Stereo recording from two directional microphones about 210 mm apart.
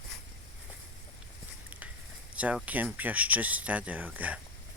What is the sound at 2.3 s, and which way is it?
Speech, 5° right (ahead or behind).